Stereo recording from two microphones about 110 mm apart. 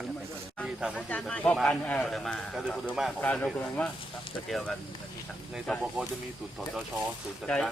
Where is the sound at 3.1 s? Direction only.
10° left (ahead or behind).